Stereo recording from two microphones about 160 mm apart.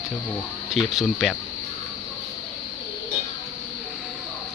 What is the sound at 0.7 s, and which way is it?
Speech, centre (ahead or behind).